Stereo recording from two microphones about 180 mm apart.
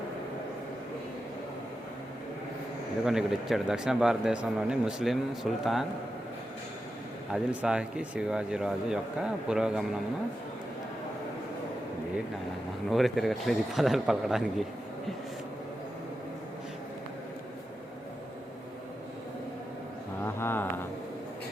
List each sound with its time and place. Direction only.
3.1 s speech: centre (ahead or behind)
7.3 s speech: 5° right (ahead or behind)
12.9 s speech: centre (ahead or behind)
20.2 s a sound: 10° left (ahead or behind)